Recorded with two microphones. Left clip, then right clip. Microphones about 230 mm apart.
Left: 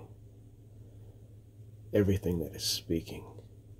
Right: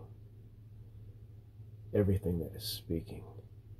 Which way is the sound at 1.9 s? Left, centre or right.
Centre.